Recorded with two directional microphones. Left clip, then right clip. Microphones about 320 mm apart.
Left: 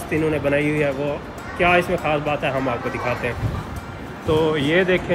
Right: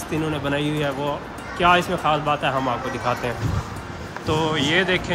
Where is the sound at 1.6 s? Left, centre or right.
Centre.